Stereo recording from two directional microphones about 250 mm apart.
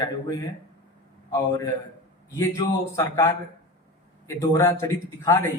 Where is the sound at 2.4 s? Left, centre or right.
Centre.